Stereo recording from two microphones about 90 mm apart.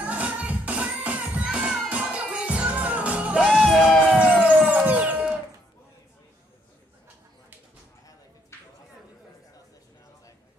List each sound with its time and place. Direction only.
0.0 s music: 15° right (ahead or behind)
3.6 s music: 5° left (ahead or behind)
4.1 s music: 15° right (ahead or behind)